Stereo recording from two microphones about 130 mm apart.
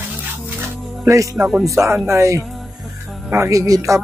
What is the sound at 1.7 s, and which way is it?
A man's voice, 20° right (ahead or behind).